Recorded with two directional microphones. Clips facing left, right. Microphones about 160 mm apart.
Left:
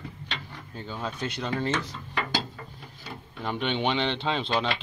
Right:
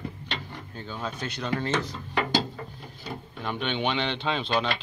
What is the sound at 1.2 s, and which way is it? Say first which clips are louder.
Speech: left 1 dB; 20° left (ahead or behind).